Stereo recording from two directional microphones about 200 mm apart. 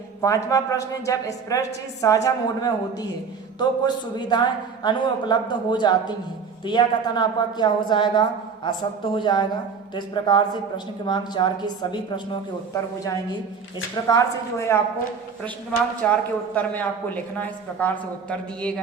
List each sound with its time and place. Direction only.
0.2 s a woman's voice: 15° left (ahead or behind)
16.0 s a woman's voice: 5° left (ahead or behind)
17.4 s a woman's voice: 10° left (ahead or behind)